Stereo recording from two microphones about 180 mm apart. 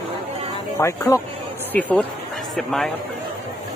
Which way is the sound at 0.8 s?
15° left (ahead or behind).